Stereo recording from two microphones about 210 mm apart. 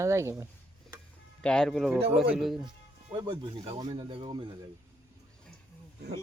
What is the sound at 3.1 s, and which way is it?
Speech, 20° right (ahead or behind).